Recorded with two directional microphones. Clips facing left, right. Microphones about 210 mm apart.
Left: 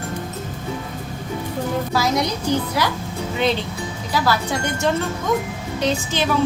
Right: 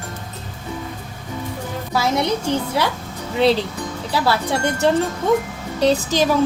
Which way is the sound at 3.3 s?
35° right (ahead or behind).